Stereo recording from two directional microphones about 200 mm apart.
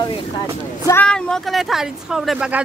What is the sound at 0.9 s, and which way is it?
Speech, 5° left (ahead or behind).